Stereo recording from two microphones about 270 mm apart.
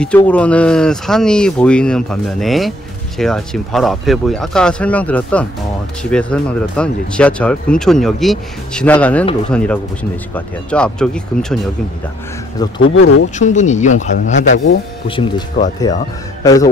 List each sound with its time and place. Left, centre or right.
0.0 s speech: centre
12.8 s speech: left
13.4 s a man's voice: left